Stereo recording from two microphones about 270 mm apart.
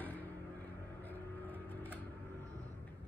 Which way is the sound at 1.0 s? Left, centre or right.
Centre.